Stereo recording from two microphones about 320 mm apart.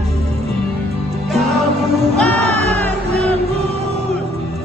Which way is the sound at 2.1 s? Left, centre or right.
Centre.